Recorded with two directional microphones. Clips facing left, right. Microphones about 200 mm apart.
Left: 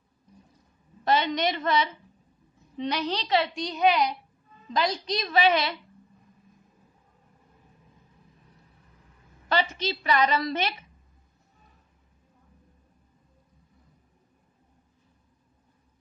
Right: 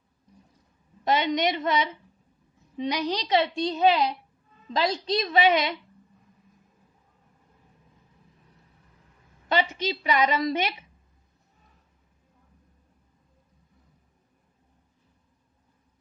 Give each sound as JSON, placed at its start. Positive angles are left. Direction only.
{"t": 1.0, "sound": "a woman's voice", "side_deg": -15}
{"t": 9.5, "sound": "a woman's voice", "side_deg": -15}